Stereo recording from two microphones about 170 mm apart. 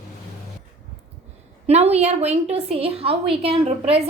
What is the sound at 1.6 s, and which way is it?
A woman's voice, 40° right (ahead or behind).